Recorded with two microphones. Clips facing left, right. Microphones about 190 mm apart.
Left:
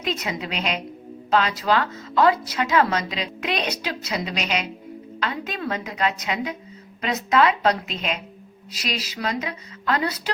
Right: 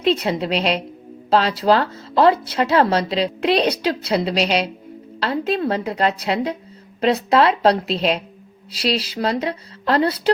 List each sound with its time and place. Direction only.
0.0 s speech: 30° right (ahead or behind)